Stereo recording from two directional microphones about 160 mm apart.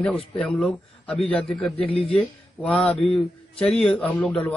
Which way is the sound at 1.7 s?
40° left (ahead or behind).